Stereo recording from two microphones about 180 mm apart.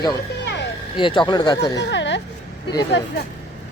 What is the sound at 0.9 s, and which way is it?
Speech, 25° left (ahead or behind).